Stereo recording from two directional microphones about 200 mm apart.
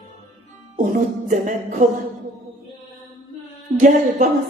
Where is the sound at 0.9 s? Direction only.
40° right (ahead or behind).